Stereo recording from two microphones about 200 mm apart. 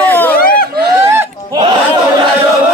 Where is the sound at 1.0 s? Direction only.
15° right (ahead or behind).